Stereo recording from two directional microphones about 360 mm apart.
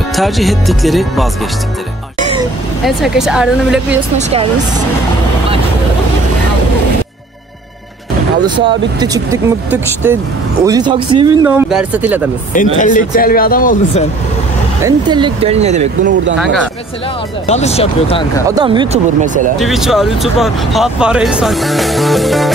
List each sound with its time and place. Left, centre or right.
0.1 s speech: centre
2.8 s speech: centre
4.2 s speech: centre
8.5 s speech: centre
12.5 s speech: left
14.8 s speech: centre
17.5 s speech: centre
18.5 s speech: centre
19.6 s speech: centre